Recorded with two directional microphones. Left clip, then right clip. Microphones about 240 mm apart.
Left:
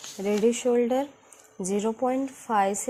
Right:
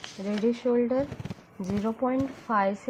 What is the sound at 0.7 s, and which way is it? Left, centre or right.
A woman's voice, left.